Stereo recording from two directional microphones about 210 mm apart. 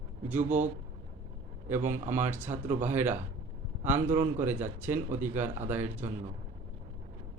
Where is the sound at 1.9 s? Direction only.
10° right (ahead or behind).